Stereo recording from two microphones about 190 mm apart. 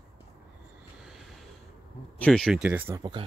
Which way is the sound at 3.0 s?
25° right (ahead or behind).